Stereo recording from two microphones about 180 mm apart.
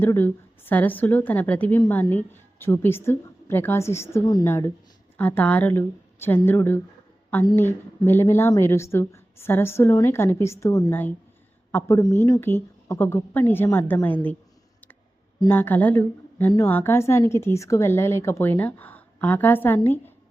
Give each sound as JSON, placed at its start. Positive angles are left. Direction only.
{"t": 0.0, "sound": "a woman's voice", "side_deg": 10}
{"t": 15.4, "sound": "a woman's voice", "side_deg": 10}